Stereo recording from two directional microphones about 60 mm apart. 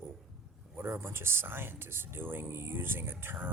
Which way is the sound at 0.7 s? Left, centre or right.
Right.